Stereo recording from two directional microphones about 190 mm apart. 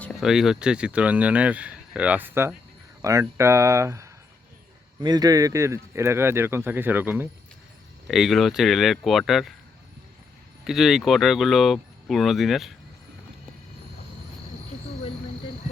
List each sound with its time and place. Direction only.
0.0 s speech: centre (ahead or behind)
8.0 s speech: centre (ahead or behind)
10.6 s speech: centre (ahead or behind)